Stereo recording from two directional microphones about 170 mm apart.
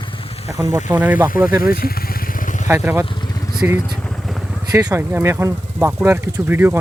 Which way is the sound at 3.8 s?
5° left (ahead or behind).